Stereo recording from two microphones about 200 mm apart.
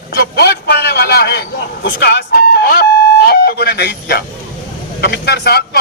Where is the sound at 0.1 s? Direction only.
55° left (ahead or behind).